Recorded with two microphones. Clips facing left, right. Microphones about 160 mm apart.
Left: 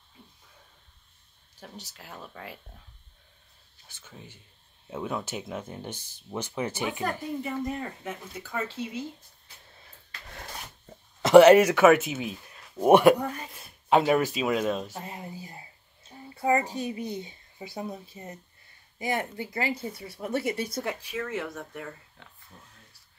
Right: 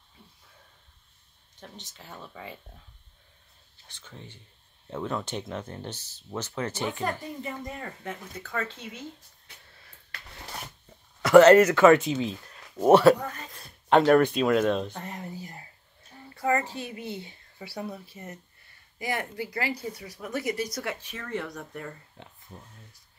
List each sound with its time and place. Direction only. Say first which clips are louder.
1.6 s speech: left 1 dB; 10° left (ahead or behind)
3.8 s speech: right 1 dB; 5° left (ahead or behind)
11.2 s speech: even; 15° left (ahead or behind)
20.9 s speech: left 2 dB; 10° left (ahead or behind)
22.2 s speech: right 5 dB; 20° right (ahead or behind)